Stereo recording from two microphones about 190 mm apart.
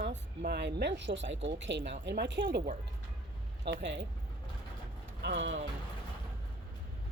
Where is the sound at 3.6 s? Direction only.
70° right (ahead or behind).